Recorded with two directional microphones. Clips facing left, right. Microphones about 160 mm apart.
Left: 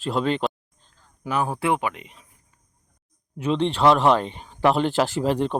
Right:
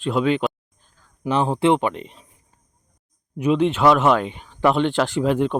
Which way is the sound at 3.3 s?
10° right (ahead or behind).